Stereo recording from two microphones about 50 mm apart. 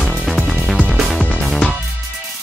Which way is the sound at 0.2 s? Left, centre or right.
Centre.